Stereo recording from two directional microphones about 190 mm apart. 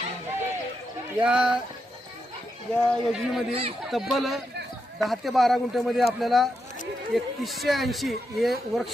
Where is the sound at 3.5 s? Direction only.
30° right (ahead or behind).